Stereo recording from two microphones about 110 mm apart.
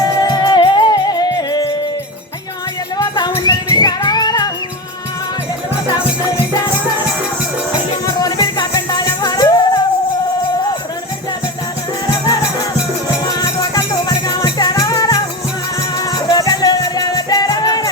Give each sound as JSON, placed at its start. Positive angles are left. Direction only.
{"t": 0.0, "sound": "music", "side_deg": 35}
{"t": 3.0, "sound": "music", "side_deg": 40}
{"t": 8.0, "sound": "music", "side_deg": 35}
{"t": 13.1, "sound": "music", "side_deg": 35}